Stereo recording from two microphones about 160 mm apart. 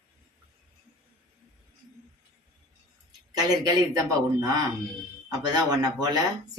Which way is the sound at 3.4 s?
20° right (ahead or behind).